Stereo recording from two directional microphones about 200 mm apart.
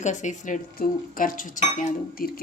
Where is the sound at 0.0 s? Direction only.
35° left (ahead or behind).